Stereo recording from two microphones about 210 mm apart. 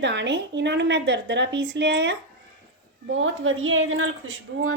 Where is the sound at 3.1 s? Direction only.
70° right (ahead or behind).